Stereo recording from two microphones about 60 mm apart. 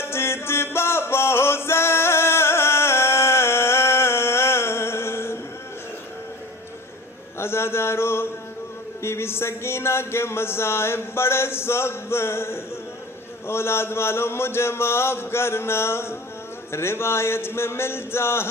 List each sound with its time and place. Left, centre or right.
0.0 s music: left
7.3 s a sound: left
9.0 s speech: left